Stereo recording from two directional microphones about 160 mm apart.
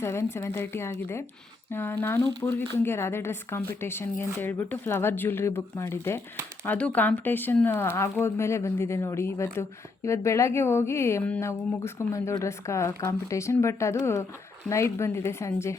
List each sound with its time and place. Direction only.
0.0 s speech: 15° left (ahead or behind)